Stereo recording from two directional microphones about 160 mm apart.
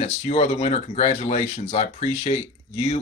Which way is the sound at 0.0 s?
40° left (ahead or behind).